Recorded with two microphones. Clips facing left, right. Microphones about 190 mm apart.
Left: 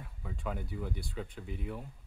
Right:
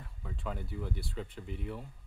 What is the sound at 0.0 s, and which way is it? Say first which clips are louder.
Speech: left 1 dB; 5° left (ahead or behind).